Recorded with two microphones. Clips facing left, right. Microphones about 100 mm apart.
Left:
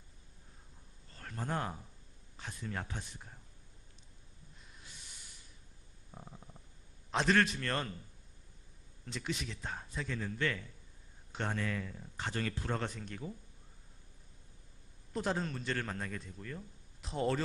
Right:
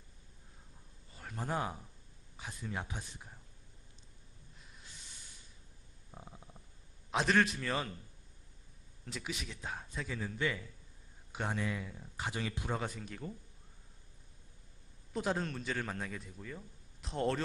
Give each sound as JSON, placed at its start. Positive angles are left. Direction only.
{"t": 1.1, "sound": "a sound", "side_deg": -10}
{"t": 2.4, "sound": "speech", "side_deg": -5}
{"t": 6.1, "sound": "stomach rumble", "side_deg": -5}
{"t": 7.1, "sound": "a man's voice", "side_deg": -5}
{"t": 9.0, "sound": "a man's voice", "side_deg": -5}
{"t": 15.1, "sound": "a man's voice", "side_deg": 0}